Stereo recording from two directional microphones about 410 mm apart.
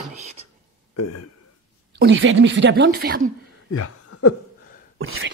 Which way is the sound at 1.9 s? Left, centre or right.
Right.